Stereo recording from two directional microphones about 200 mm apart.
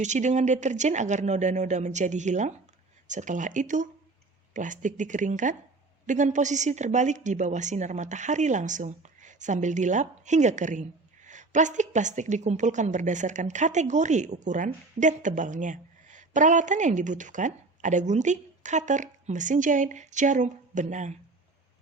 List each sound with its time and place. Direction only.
0.0 s a woman's voice: 35° right (ahead or behind)